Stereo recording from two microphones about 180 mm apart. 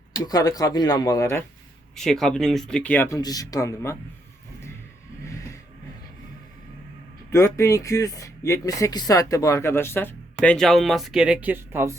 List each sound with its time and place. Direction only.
0.3 s speech: 20° left (ahead or behind)
2.0 s speech: centre (ahead or behind); by 3.9 s 20° left (ahead or behind)
7.3 s speech: 15° left (ahead or behind); by 11.9 s 10° right (ahead or behind)